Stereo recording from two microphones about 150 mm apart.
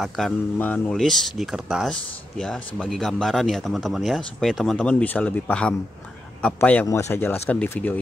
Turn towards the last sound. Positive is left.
turn(degrees=10)  # may be behind; listen again after turning